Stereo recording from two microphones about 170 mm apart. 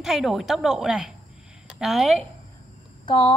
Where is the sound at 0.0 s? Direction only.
Centre (ahead or behind).